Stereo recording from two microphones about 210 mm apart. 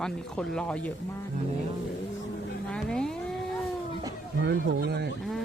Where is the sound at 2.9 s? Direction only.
5° left (ahead or behind).